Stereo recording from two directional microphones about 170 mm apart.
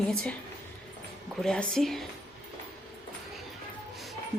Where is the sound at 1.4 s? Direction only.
5° left (ahead or behind).